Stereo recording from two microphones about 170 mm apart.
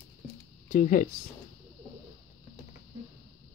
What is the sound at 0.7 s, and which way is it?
Speech, 55° left (ahead or behind).